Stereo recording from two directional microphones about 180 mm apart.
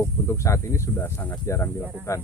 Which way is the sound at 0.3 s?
15° left (ahead or behind).